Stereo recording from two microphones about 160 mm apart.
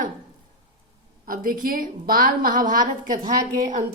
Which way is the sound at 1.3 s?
65° right (ahead or behind).